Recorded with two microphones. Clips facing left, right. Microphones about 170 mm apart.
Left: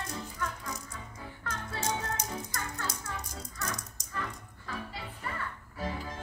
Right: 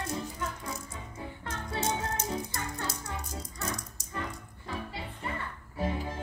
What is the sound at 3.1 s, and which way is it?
Rattle, 20° right (ahead or behind).